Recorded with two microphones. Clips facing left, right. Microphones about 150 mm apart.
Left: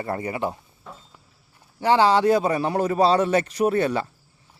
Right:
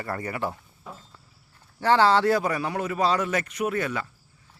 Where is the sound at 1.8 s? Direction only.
15° left (ahead or behind); by 4.1 s 30° left (ahead or behind).